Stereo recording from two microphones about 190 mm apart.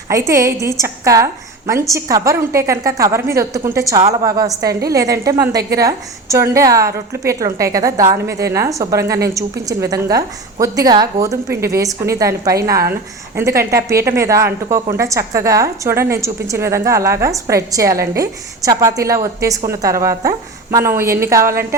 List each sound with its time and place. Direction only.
0.1 s a woman's voice: 15° right (ahead or behind)